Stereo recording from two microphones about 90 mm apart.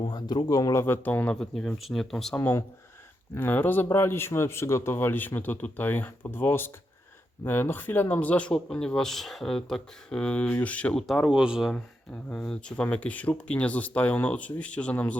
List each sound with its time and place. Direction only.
0.0 s speech: 55° left (ahead or behind); by 0.9 s 35° left (ahead or behind)
1.0 s a man's voice: 20° left (ahead or behind)
1.4 s speech: 5° left (ahead or behind)
2.3 s a man's voice: 20° left (ahead or behind)
11.0 s speech: centre (ahead or behind)
12.1 s speech: 10° left (ahead or behind)